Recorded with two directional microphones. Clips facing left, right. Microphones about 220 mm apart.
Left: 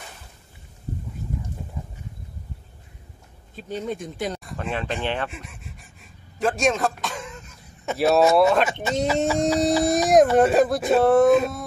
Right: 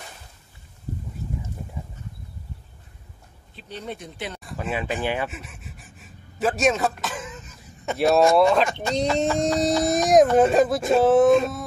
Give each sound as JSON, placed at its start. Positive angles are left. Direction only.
{"t": 3.5, "sound": "speech", "side_deg": 45}
{"t": 4.4, "sound": "pant", "side_deg": 0}
{"t": 8.8, "sound": "speech", "side_deg": 0}